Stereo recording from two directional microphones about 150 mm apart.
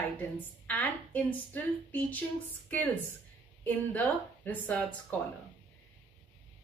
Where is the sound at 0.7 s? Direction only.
10° left (ahead or behind).